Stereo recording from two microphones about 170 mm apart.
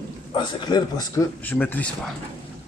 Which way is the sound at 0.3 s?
30° left (ahead or behind).